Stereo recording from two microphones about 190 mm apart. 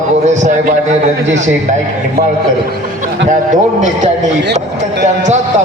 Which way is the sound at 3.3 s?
40° right (ahead or behind).